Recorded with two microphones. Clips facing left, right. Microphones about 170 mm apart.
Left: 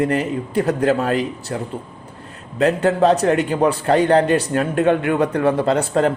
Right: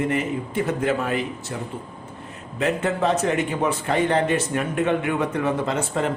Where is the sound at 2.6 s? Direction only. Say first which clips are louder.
Left 7 dB; 35° left (ahead or behind).